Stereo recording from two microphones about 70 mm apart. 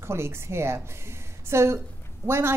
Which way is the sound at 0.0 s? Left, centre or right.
Right.